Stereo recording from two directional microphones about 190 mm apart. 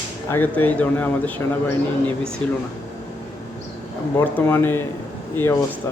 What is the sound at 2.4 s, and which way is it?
Speech, 5° left (ahead or behind).